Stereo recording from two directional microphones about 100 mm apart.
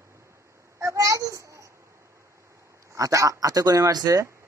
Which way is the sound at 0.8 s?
30° right (ahead or behind).